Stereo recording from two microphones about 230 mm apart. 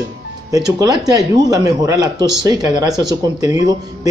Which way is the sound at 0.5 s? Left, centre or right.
Centre.